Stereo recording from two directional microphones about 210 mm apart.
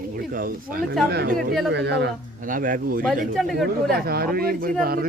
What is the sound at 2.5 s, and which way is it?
Speech, 40° right (ahead or behind).